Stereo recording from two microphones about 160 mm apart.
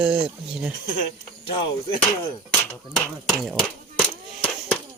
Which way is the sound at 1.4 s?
35° left (ahead or behind).